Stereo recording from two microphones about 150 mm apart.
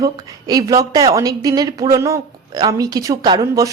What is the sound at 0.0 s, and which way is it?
A woman's voice, 25° right (ahead or behind).